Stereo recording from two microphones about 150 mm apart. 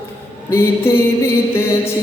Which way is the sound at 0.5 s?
15° left (ahead or behind).